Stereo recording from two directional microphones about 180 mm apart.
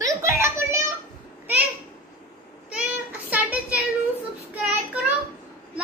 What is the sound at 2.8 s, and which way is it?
Child singing, 10° right (ahead or behind).